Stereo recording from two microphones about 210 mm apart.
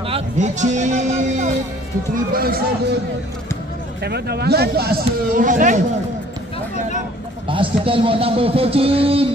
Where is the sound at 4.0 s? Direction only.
50° right (ahead or behind).